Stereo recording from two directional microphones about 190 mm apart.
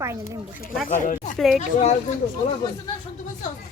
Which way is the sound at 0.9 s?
45° left (ahead or behind).